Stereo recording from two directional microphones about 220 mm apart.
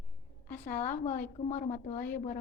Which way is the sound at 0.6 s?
30° left (ahead or behind).